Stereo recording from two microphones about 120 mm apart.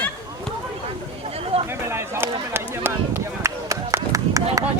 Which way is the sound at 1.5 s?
55° right (ahead or behind).